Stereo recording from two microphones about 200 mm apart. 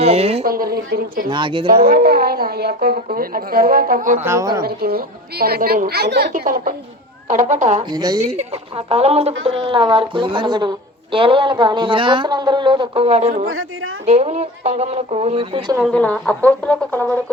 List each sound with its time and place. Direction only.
0.0 s speech: 30° right (ahead or behind)
0.4 s a woman's voice: 45° right (ahead or behind)
1.3 s speech: 25° right (ahead or behind)
1.7 s a woman's voice: 45° right (ahead or behind)
4.2 s speech: 15° right (ahead or behind)
4.6 s a woman's voice: 50° right (ahead or behind)
7.9 s speech: 20° right (ahead or behind)
8.2 s speech: 30° right (ahead or behind)
13.5 s speech: 90° right
14.0 s speech: 35° right (ahead or behind)
15.8 s speech: 5° left (ahead or behind)